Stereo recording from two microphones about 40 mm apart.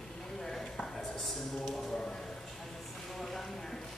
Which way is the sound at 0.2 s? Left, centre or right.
Centre.